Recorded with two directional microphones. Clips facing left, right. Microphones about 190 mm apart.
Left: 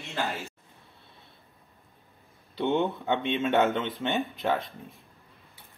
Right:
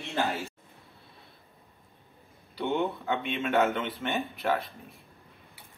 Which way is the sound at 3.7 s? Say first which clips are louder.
Left 2 dB; 20° left (ahead or behind).